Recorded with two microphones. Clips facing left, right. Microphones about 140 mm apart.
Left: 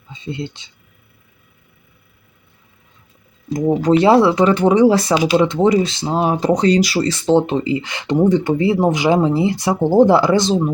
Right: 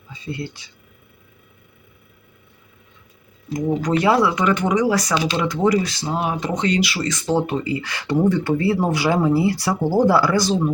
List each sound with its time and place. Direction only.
0.1 s speech: 20° left (ahead or behind)
3.8 s speech: 30° left (ahead or behind)
5.1 s speech: 10° left (ahead or behind)
5.4 s speech: 25° left (ahead or behind)